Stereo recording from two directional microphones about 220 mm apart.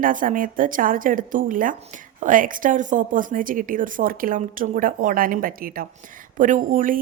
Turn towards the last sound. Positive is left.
turn(degrees=-35)  # may be behind; listen again after turning